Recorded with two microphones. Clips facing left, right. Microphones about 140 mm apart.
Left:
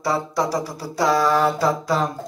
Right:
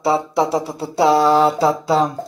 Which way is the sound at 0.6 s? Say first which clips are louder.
Right 5 dB; 25° right (ahead or behind).